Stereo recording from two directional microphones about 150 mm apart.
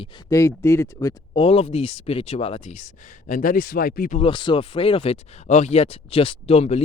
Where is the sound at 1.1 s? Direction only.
40° left (ahead or behind); by 4.2 s 75° left (ahead or behind).